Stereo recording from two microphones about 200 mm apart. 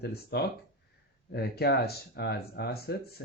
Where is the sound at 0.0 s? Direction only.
55° left (ahead or behind).